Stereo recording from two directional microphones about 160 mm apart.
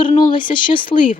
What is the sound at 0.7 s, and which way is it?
Speech, 30° left (ahead or behind).